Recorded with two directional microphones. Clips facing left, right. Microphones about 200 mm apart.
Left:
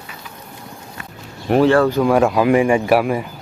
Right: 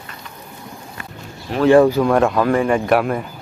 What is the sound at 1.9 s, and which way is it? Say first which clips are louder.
Speech: left 1 dB; 5° left (ahead or behind).